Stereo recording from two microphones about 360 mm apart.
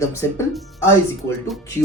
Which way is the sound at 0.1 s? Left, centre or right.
Centre.